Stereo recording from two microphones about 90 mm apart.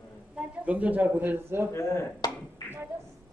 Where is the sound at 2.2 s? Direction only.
50° left (ahead or behind).